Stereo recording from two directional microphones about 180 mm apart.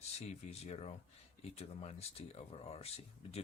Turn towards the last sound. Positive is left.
turn(degrees=35)  # may be behind; listen again after turning